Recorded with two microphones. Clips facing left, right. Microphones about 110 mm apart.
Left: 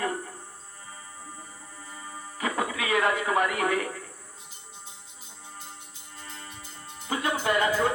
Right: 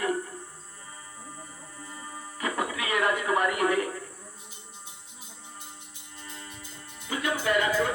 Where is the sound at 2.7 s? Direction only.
25° left (ahead or behind).